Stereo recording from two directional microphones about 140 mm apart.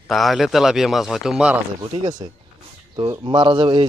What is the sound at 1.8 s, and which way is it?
A man's voice, 30° right (ahead or behind).